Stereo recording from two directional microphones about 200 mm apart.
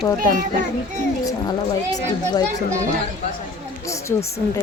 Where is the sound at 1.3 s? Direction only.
20° left (ahead or behind).